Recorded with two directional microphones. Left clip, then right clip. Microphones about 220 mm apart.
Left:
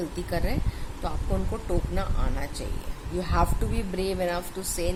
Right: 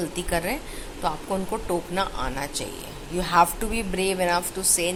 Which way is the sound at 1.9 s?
10° left (ahead or behind).